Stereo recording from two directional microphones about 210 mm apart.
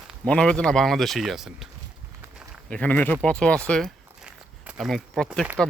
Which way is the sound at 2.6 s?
5° left (ahead or behind).